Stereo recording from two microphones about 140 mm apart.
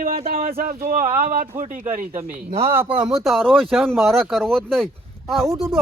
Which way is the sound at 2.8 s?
40° right (ahead or behind).